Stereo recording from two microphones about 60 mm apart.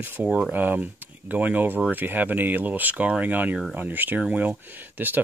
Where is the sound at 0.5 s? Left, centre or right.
Right.